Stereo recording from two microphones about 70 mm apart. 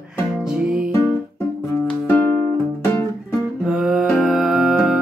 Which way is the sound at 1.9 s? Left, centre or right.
Left.